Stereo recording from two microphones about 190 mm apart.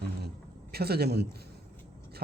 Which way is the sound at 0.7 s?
55° right (ahead or behind).